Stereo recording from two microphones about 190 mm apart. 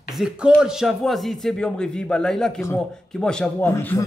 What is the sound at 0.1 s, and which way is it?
Speech, 5° right (ahead or behind).